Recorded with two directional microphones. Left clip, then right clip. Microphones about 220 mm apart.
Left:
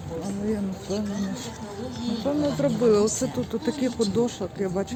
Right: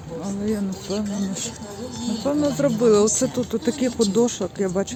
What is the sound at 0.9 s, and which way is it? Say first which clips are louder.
Speech: right 2 dB; 45° right (ahead or behind).